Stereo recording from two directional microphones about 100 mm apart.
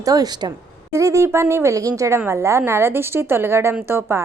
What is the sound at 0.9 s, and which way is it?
A woman's voice, 30° right (ahead or behind).